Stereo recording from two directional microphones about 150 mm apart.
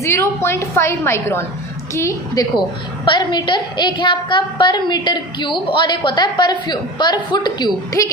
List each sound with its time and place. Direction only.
0.0 s a woman's voice: 20° left (ahead or behind)